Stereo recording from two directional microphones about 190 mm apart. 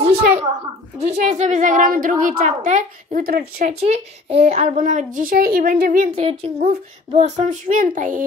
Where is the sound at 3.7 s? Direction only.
35° right (ahead or behind); by 6.0 s 50° right (ahead or behind).